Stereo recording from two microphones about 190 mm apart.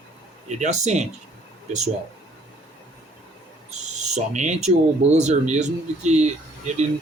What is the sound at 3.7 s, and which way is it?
Speech, 35° right (ahead or behind).